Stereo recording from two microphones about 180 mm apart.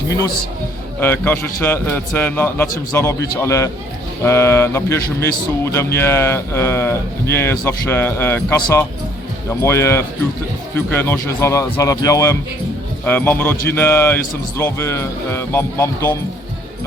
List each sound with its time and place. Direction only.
0.9 s a man's voice: 10° left (ahead or behind)